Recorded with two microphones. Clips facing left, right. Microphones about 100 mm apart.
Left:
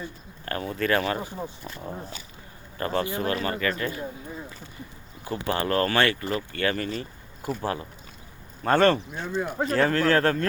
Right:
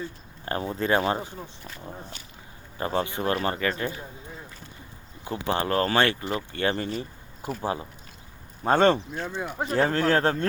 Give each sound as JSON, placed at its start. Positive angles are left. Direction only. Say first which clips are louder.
{"t": 0.4, "sound": "speech", "louder": "even", "side_deg": -25}
{"t": 1.6, "sound": "speech", "louder": "left 4 dB", "side_deg": 15}
{"t": 2.7, "sound": "speech", "louder": "left 1 dB", "side_deg": -10}
{"t": 5.2, "sound": "speech", "louder": "even", "side_deg": -20}
{"t": 6.9, "sound": "a sound", "louder": "right 1 dB", "side_deg": -15}
{"t": 7.6, "sound": "speech", "louder": "even", "side_deg": -20}